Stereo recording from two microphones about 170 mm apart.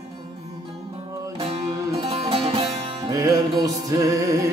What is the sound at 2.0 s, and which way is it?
Music, 35° right (ahead or behind).